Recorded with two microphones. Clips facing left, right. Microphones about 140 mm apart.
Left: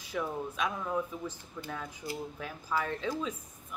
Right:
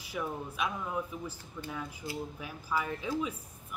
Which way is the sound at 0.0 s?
10° right (ahead or behind).